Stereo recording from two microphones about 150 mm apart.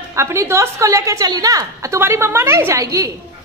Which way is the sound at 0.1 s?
20° right (ahead or behind).